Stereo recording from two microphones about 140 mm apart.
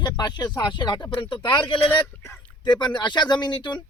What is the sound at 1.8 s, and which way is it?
Speech, 10° left (ahead or behind).